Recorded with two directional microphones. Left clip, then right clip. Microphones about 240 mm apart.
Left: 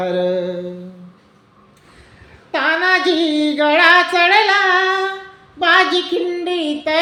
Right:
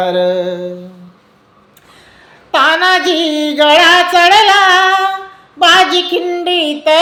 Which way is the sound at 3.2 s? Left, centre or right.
Right.